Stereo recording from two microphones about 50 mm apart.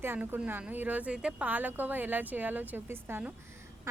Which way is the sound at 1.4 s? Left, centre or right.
Right.